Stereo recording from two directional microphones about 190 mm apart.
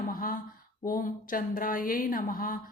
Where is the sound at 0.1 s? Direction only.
45° left (ahead or behind).